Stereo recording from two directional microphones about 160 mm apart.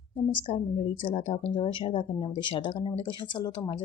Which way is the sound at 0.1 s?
30° left (ahead or behind).